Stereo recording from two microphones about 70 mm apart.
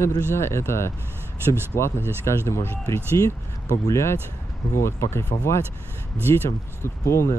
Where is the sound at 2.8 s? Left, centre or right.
Left.